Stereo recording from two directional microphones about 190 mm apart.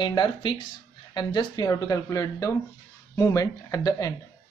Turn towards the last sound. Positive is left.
turn(degrees=20)  # may be behind; listen again after turning